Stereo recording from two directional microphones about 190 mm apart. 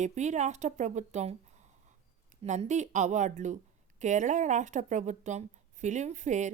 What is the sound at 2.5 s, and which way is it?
Speech, 40° right (ahead or behind).